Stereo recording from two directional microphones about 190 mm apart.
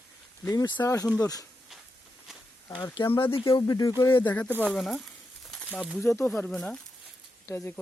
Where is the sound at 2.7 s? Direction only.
20° left (ahead or behind).